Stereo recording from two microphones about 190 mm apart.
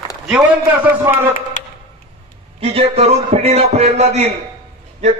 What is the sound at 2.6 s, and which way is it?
A man's voice, 30° right (ahead or behind).